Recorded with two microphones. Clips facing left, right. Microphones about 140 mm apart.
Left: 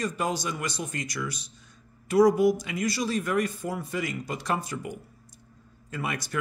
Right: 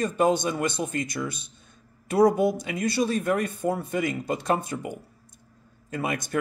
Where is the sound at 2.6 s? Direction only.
60° right (ahead or behind).